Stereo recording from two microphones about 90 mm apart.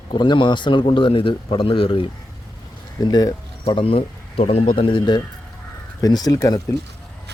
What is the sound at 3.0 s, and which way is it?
Speech, 45° left (ahead or behind).